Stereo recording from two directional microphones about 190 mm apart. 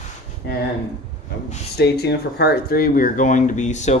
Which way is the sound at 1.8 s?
60° left (ahead or behind).